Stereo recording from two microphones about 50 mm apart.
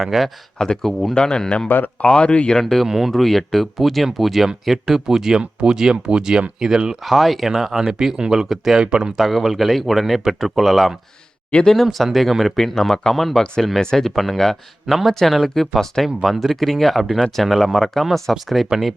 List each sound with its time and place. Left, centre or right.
0.0 s speech: centre
0.6 s speech: centre
1.6 s speech: left
2.0 s speech: left
2.6 s speech: centre
2.8 s speech: centre
3.1 s speech: centre
7.0 s speech: centre
9.1 s speech: centre